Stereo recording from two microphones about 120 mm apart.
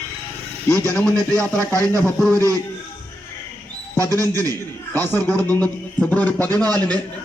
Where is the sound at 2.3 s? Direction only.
30° right (ahead or behind).